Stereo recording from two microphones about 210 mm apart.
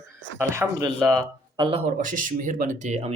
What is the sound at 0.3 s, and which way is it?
Speech, 15° right (ahead or behind).